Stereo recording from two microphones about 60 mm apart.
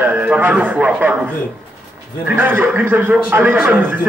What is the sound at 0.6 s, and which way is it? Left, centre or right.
A man's voice, right.